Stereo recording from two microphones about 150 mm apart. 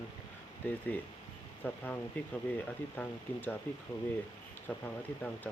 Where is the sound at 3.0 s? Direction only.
10° left (ahead or behind).